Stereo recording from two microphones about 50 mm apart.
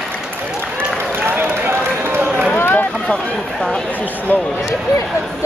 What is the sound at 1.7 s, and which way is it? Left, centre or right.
Run, right.